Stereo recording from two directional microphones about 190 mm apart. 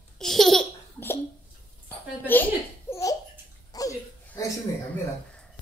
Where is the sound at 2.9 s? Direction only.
15° left (ahead or behind).